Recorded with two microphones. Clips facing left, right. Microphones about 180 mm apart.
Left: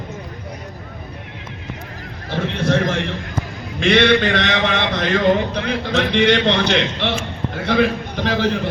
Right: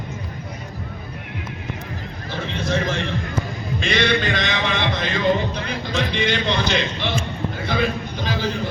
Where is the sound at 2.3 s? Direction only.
65° left (ahead or behind).